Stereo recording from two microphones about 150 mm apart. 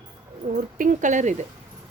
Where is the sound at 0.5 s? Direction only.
60° right (ahead or behind).